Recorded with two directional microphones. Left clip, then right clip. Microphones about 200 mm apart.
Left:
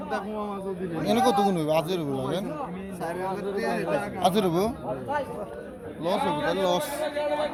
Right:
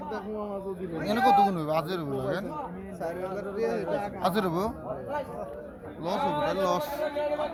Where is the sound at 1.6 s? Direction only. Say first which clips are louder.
Left 4 dB; 10° left (ahead or behind).